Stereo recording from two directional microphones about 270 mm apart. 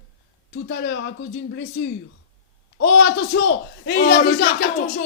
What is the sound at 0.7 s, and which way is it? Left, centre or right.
Speech, left.